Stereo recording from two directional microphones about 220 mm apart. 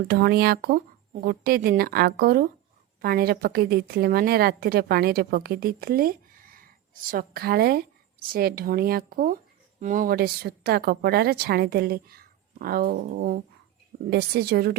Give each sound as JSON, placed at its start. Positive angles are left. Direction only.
{"t": 0.1, "sound": "a woman's voice", "side_deg": -45}